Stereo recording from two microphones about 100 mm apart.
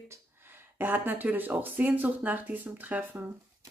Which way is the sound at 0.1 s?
20° right (ahead or behind).